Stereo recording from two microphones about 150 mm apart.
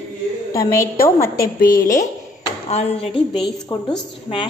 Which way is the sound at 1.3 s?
85° left.